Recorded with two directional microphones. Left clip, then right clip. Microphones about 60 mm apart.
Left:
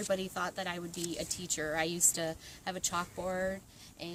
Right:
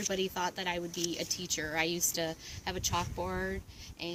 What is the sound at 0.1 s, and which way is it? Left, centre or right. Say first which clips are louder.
A woman's voice: left 1 dB; left.